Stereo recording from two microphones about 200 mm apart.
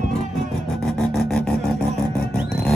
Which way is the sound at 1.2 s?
5° left (ahead or behind).